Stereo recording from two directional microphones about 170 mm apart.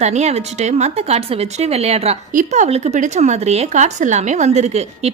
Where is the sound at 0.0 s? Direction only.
40° right (ahead or behind).